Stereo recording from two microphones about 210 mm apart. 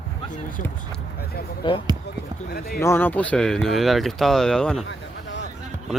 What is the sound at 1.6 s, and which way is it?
Speech, 20° left (ahead or behind).